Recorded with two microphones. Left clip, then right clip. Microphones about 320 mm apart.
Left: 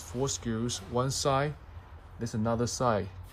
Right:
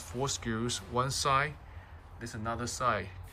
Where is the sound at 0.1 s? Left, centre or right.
Centre.